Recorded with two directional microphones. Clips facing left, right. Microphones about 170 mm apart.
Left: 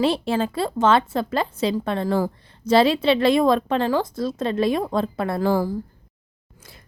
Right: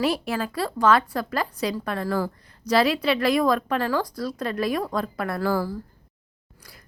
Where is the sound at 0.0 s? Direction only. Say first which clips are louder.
Left 4 dB; 25° left (ahead or behind).